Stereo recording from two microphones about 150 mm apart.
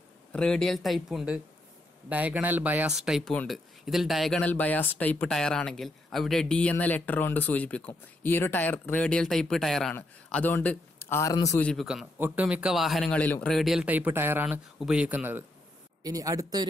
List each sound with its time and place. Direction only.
0.3 s a man's voice: 5° left (ahead or behind)
11.6 s a man's voice: centre (ahead or behind)
13.0 s speech: 10° left (ahead or behind); by 15.4 s 10° right (ahead or behind)
16.0 s speech: 25° right (ahead or behind)